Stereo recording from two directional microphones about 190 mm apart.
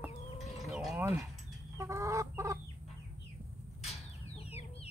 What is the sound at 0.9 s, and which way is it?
Mechanisms, 10° right (ahead or behind).